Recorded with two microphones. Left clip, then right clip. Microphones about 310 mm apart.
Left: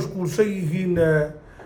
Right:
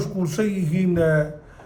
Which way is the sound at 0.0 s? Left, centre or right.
Centre.